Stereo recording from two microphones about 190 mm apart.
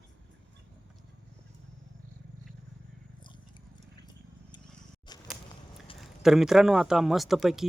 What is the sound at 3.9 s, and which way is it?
Horse, 20° left (ahead or behind).